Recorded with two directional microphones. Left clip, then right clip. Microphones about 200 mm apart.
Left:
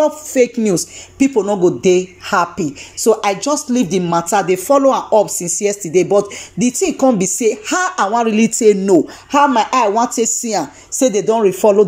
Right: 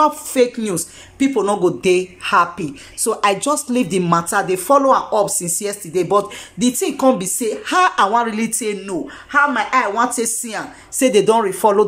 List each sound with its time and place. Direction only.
0.0 s a woman's voice: 5° left (ahead or behind)
3.3 s a woman's voice: 15° right (ahead or behind); by 5.5 s centre (ahead or behind)
5.6 s a woman's voice: 10° left (ahead or behind)
7.7 s a woman's voice: 5° right (ahead or behind)
8.2 s speech: 15° left (ahead or behind)
11.0 s a woman's voice: 5° right (ahead or behind)
11.3 s speech: 10° left (ahead or behind)